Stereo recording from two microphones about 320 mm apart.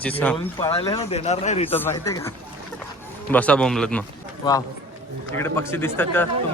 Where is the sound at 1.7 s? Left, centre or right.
Centre.